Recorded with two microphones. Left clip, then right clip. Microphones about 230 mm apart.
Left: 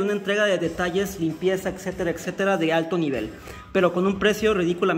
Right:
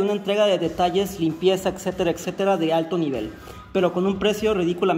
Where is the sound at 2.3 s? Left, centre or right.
Centre.